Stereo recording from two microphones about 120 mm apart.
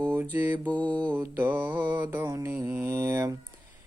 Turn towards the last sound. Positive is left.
turn(degrees=-20)  # may be behind; listen again after turning